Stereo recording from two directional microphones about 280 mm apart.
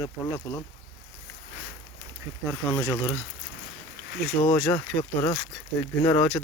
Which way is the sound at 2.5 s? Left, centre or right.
Centre.